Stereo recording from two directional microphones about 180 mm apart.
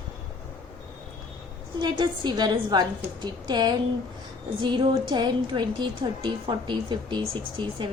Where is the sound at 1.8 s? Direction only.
25° right (ahead or behind).